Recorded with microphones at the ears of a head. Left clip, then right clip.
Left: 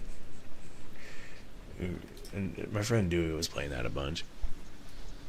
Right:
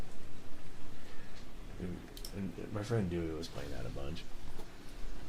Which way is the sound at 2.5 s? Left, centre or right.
Left.